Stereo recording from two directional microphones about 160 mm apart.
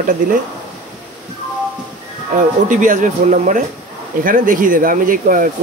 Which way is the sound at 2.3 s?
55° right (ahead or behind).